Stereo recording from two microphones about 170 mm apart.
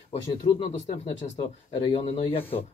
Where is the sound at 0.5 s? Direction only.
20° left (ahead or behind).